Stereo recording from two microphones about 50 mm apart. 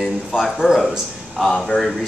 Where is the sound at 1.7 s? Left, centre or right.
Left.